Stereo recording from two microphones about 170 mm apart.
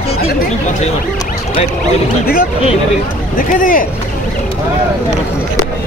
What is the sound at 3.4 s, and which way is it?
Speech, 50° left (ahead or behind).